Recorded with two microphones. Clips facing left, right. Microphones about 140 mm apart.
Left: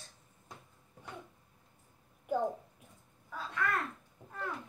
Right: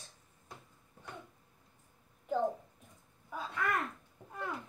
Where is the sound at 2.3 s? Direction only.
10° left (ahead or behind).